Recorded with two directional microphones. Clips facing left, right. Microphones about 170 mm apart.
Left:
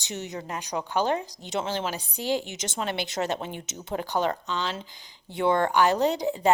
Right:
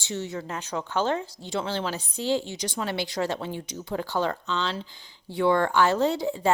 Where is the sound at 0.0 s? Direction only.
15° left (ahead or behind).